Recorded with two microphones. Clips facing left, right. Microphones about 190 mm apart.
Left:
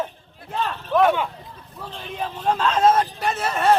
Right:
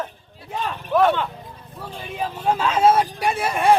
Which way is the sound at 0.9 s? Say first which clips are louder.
Even; 5° left (ahead or behind).